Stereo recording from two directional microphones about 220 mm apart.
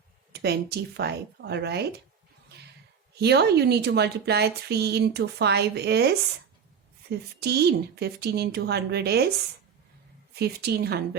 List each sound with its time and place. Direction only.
0.3 s a woman's voice: 45° right (ahead or behind)
2.5 s a sound: 45° right (ahead or behind)
3.2 s a woman's voice: 50° right (ahead or behind)
10.3 s a woman's voice: 45° right (ahead or behind)